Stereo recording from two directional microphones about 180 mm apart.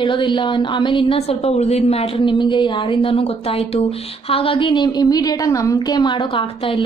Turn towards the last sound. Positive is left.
turn(degrees=30)  # may be behind; listen again after turning